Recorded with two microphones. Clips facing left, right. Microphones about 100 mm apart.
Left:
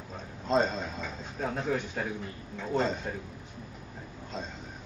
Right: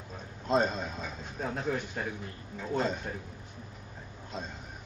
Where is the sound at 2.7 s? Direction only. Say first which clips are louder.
Left 2 dB; 5° right (ahead or behind).